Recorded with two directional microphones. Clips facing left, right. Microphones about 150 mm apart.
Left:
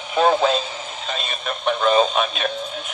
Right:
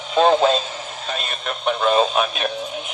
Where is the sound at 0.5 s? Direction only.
Centre (ahead or behind).